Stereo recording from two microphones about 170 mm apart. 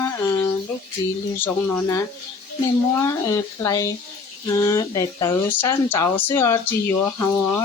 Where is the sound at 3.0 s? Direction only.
15° left (ahead or behind).